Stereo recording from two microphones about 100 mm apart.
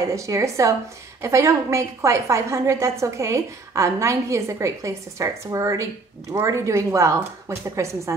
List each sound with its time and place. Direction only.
0.0 s a woman's voice: 30° right (ahead or behind)